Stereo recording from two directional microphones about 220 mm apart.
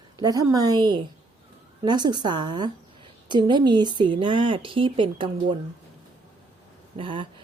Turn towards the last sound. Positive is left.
turn(degrees=-25)  # may be behind; listen again after turning